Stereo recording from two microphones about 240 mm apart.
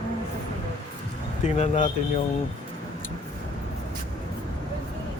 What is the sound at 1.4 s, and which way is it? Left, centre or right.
Speech, left.